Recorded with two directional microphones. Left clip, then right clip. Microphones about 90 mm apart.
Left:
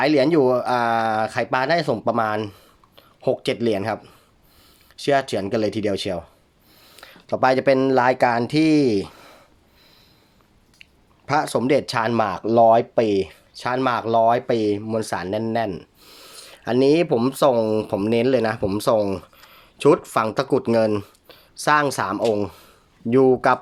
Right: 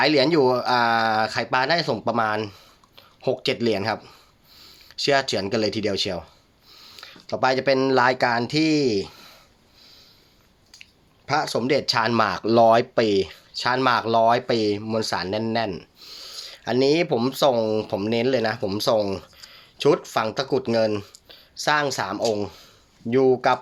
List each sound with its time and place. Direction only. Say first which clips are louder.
0.0 s speech: left 1 dB; 40° left (ahead or behind)
6.7 s a sound: right 2 dB; 60° left (ahead or behind); by 7.8 s 90° left
7.8 s speech: left 2 dB; 40° left (ahead or behind); by 8.9 s 80° left
11.3 s speech: left 3 dB; 90° left
12.1 s speech: left 2 dB; 25° left (ahead or behind)
13.0 s speech: left 1 dB; 30° left (ahead or behind); by 23.6 s 90° left